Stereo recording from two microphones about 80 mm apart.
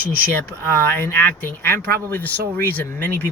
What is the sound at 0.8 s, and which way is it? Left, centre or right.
Speech, left.